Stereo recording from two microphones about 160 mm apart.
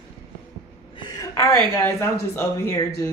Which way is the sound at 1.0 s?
20° left (ahead or behind).